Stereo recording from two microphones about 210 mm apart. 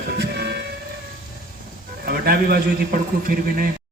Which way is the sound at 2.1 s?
45° right (ahead or behind).